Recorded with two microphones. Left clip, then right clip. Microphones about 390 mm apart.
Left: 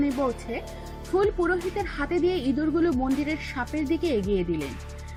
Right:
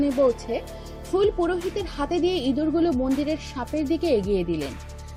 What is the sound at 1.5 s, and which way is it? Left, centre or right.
Speech, centre.